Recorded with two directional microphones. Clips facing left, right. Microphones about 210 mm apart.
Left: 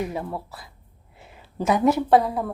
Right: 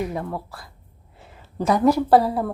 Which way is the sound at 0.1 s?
5° left (ahead or behind).